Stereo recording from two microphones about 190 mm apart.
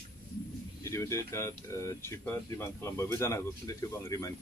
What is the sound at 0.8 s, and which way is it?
Speech, 15° left (ahead or behind).